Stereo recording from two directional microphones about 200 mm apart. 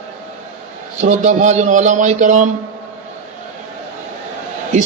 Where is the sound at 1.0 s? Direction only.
35° right (ahead or behind).